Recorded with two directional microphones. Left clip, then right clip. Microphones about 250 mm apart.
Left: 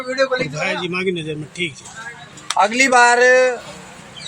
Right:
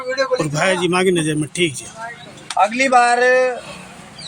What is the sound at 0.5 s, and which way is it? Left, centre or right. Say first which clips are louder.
Speech: right 5 dB; right.